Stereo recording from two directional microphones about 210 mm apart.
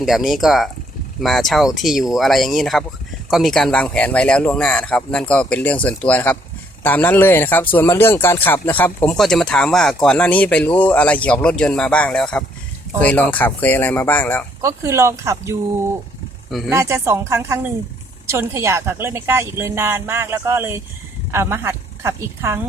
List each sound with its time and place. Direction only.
0.0 s speech: centre (ahead or behind)
14.6 s a woman's voice: 15° right (ahead or behind)
16.7 s a woman's voice: 15° right (ahead or behind)